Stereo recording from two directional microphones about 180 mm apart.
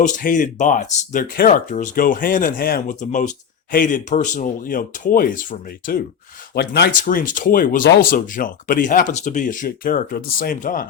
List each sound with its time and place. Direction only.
0.0 s speech: 45° left (ahead or behind)
6.5 s speech: 60° left (ahead or behind)
7.0 s speech: 50° left (ahead or behind)